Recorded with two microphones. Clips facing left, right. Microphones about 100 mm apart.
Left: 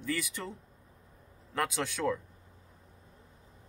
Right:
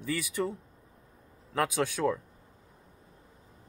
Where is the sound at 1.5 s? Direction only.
5° right (ahead or behind).